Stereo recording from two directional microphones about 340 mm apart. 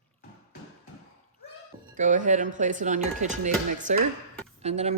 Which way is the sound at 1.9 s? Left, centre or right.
Right.